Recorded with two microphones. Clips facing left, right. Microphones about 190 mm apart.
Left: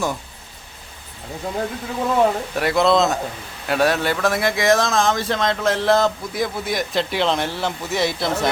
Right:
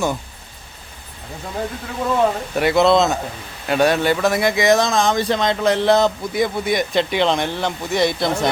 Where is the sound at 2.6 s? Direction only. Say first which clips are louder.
Right 3 dB; centre (ahead or behind).